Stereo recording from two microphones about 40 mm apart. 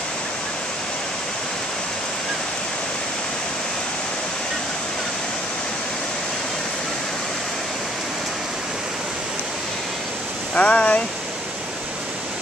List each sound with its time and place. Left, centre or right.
10.5 s speech: left